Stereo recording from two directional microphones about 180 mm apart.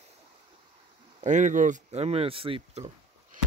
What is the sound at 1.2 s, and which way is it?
Speech, 40° right (ahead or behind).